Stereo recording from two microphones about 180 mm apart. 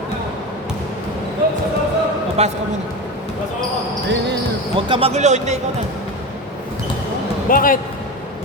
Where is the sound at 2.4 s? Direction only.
35° right (ahead or behind).